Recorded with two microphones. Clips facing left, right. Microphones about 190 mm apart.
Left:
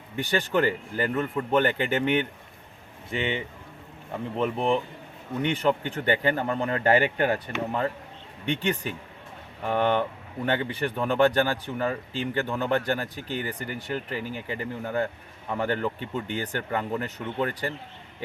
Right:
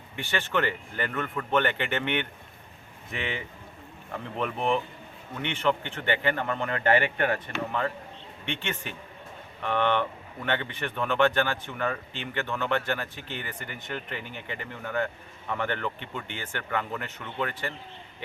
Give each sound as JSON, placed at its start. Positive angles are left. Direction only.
{"t": 0.2, "sound": "speech", "side_deg": 40}
{"t": 3.1, "sound": "speech", "side_deg": 30}